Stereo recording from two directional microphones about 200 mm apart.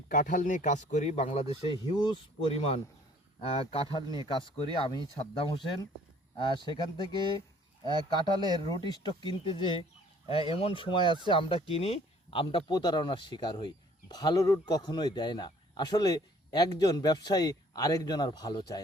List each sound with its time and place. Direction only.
0.1 s speech: 40° left (ahead or behind); by 5.0 s 25° left (ahead or behind)
6.3 s speech: 25° left (ahead or behind)
7.9 s speech: 20° right (ahead or behind)
8.9 s speech: 25° left (ahead or behind)